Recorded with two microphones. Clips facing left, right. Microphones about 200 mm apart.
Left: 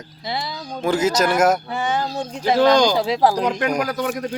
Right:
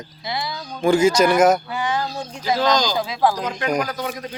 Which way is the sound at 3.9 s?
50° left (ahead or behind).